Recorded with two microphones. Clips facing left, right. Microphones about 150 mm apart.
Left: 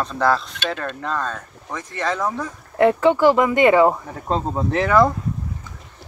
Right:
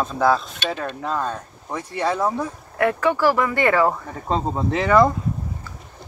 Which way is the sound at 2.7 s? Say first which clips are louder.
Left 5 dB; 25° left (ahead or behind).